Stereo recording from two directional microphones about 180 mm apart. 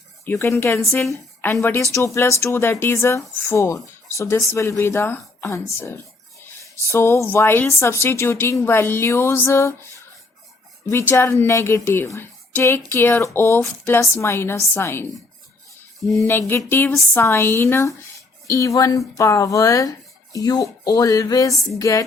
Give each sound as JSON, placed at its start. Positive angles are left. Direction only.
{"t": 0.3, "sound": "a woman's voice", "side_deg": 15}
{"t": 6.8, "sound": "a woman's voice", "side_deg": 15}
{"t": 10.8, "sound": "a woman's voice", "side_deg": 15}
{"t": 16.5, "sound": "a woman's voice", "side_deg": 15}